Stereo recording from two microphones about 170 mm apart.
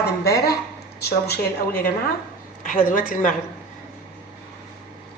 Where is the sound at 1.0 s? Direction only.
70° left (ahead or behind).